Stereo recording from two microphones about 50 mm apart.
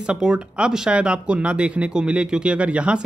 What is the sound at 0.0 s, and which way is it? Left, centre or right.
Speech, centre.